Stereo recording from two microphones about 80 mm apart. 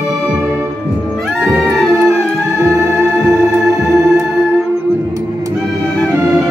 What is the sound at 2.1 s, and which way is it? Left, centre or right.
Music, right.